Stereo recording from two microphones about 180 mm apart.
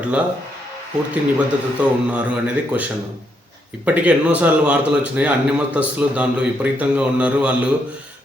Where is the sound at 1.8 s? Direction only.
5° right (ahead or behind).